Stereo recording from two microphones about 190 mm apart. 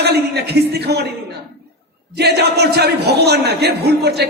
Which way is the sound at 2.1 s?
60° right (ahead or behind).